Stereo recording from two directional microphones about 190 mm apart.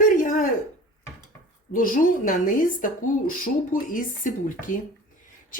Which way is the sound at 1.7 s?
45° left (ahead or behind).